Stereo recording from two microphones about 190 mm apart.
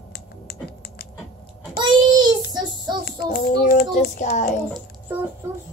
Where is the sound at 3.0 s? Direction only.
55° left (ahead or behind).